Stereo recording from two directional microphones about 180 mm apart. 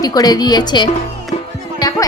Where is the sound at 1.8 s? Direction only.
20° left (ahead or behind).